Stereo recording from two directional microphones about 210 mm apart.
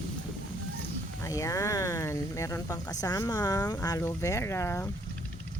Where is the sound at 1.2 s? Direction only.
15° left (ahead or behind).